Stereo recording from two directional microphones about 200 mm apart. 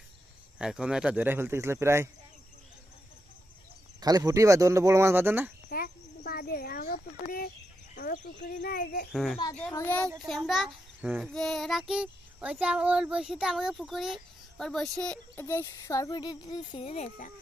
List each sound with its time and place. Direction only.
0.6 s speech: 5° right (ahead or behind)
4.0 s speech: 20° right (ahead or behind)
5.6 s a sound: 45° left (ahead or behind)
7.9 s speech: 50° left (ahead or behind)
9.1 s a child's voice: centre (ahead or behind); by 17.3 s 35° left (ahead or behind)